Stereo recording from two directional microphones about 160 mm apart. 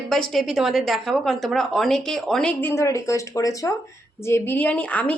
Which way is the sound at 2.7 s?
20° left (ahead or behind).